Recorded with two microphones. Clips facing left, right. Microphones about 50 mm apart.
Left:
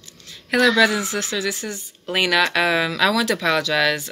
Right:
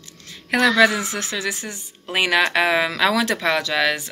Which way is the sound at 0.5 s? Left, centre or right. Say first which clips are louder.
Even; right.